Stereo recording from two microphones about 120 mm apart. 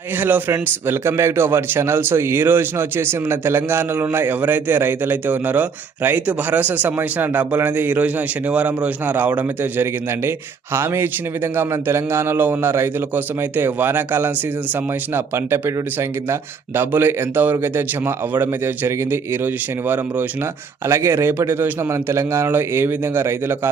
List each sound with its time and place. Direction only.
0.2 s a man's voice: 15° right (ahead or behind)
20.8 s speech: 20° right (ahead or behind)